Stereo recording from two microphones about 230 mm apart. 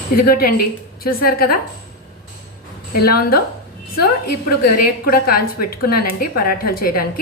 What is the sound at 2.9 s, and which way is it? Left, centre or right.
Speech, left.